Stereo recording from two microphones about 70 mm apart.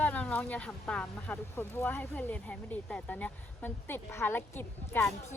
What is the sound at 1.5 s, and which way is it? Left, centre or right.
Speech, left.